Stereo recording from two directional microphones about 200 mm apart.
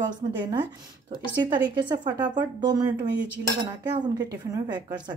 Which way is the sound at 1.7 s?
20° right (ahead or behind).